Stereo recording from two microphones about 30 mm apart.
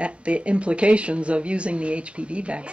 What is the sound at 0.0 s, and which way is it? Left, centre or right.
Speech, right.